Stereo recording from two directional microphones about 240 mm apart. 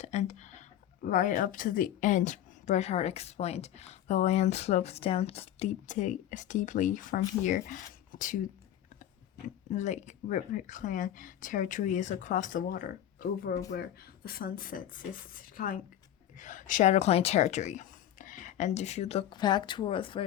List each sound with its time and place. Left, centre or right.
0.0 s a sound: left
1.0 s a woman's voice: left
9.6 s a woman's voice: left